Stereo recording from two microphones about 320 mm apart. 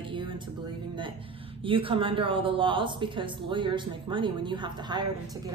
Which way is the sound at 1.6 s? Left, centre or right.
Centre.